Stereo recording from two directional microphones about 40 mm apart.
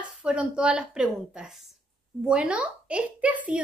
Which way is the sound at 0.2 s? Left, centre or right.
Right.